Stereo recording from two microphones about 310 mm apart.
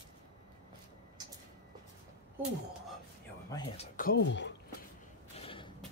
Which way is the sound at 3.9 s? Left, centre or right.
Left.